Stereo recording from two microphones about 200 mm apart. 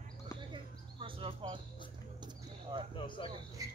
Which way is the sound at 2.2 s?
20° right (ahead or behind).